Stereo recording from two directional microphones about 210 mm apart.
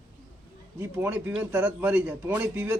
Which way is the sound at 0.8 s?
10° right (ahead or behind).